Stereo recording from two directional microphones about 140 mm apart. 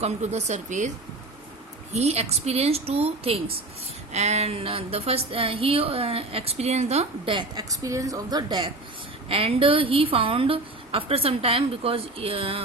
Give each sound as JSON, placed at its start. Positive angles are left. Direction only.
{"t": 0.0, "sound": "speech", "side_deg": -50}
{"t": 1.9, "sound": "speech", "side_deg": -50}
{"t": 7.3, "sound": "a woman's voice", "side_deg": -25}
{"t": 9.3, "sound": "a woman's voice", "side_deg": -40}